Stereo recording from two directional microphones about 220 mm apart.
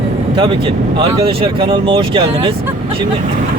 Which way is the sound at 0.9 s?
25° right (ahead or behind).